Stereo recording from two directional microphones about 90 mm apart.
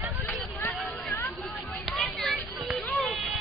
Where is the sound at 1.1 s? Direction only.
30° left (ahead or behind).